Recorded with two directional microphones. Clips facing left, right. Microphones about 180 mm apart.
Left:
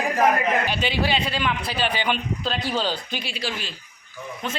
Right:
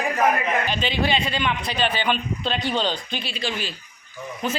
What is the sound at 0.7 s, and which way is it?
A man's voice, 10° left (ahead or behind).